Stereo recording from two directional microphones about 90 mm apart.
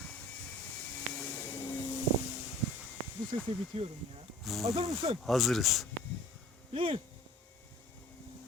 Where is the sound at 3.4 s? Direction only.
90° right.